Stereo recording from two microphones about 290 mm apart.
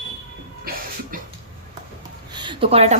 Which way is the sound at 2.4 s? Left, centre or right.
Centre.